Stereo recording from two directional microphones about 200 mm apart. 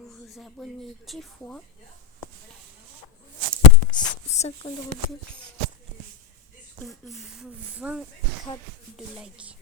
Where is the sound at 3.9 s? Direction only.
20° left (ahead or behind).